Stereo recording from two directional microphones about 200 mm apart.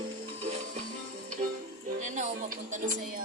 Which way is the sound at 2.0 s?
35° right (ahead or behind).